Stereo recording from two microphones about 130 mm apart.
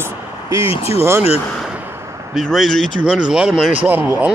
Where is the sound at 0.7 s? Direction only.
50° left (ahead or behind).